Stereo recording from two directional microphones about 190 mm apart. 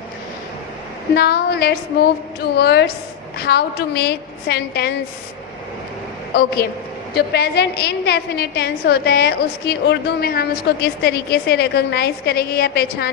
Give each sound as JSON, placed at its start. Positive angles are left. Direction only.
{"t": 1.1, "sound": "a woman's voice", "side_deg": 55}
{"t": 6.3, "sound": "a woman's voice", "side_deg": 55}